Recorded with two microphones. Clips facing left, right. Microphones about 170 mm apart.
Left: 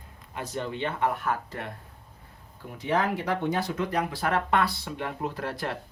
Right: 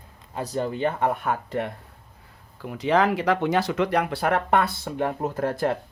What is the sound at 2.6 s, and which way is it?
Speech, 90° right.